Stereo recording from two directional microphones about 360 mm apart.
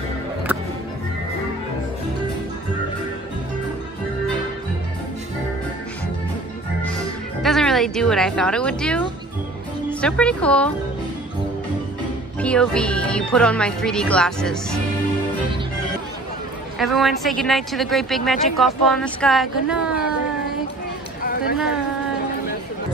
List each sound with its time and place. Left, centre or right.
7.4 s speech: centre
12.4 s a woman's voice: centre
16.7 s a woman's voice: centre
21.2 s a sound: left